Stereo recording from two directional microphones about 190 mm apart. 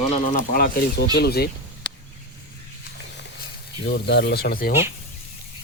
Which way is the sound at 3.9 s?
65° left (ahead or behind).